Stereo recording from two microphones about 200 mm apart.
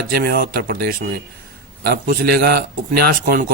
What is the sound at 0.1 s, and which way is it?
Speech, 50° right (ahead or behind).